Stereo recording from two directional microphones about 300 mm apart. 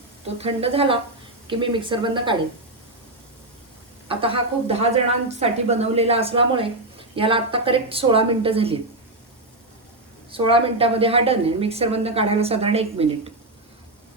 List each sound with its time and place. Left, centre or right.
0.3 s a woman's voice: centre
4.1 s a woman's voice: centre
10.3 s a woman's voice: centre